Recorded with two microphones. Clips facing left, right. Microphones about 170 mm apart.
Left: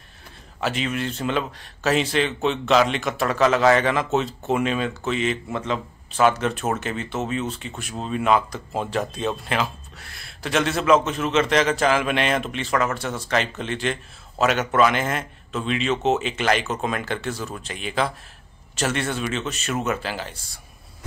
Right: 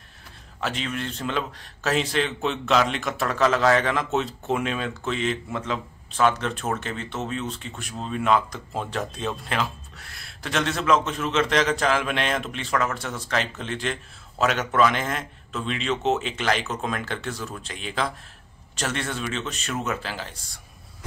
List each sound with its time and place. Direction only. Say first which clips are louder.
0.6 s speech: left 4 dB; 5° left (ahead or behind)